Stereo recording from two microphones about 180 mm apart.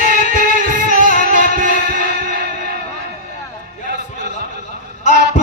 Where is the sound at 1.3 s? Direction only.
45° left (ahead or behind).